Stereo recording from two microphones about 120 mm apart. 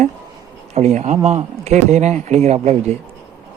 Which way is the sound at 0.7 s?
70° right (ahead or behind).